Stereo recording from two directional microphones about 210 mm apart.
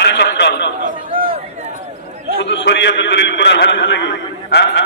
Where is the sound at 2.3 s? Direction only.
55° left (ahead or behind).